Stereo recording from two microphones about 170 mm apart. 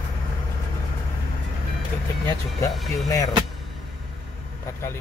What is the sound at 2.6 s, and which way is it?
Speech, 20° left (ahead or behind).